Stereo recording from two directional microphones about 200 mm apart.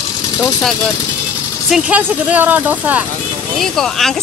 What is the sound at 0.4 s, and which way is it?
Speech, centre (ahead or behind).